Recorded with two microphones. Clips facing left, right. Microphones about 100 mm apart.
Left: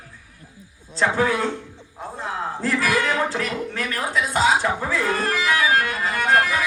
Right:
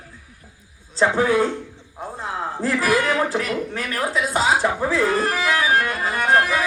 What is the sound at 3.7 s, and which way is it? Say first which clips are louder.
Music: right 1 dB; 30° right (ahead or behind).